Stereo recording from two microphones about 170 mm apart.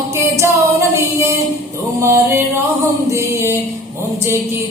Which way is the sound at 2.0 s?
15° right (ahead or behind).